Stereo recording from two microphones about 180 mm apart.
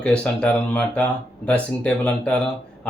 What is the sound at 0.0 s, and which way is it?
Speech, 5° left (ahead or behind).